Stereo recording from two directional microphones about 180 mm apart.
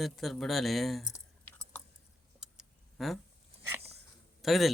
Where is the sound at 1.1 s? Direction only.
10° left (ahead or behind).